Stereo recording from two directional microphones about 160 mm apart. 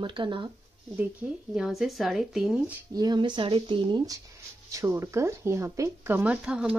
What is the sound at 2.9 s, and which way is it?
Speech, 25° right (ahead or behind).